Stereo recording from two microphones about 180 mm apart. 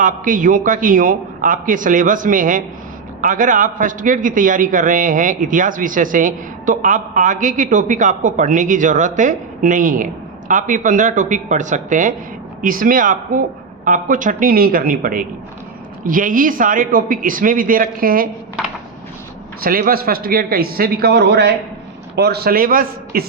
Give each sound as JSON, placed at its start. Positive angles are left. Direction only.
{"t": 0.0, "sound": "a man's voice", "side_deg": -45}
{"t": 19.6, "sound": "a man's voice", "side_deg": -55}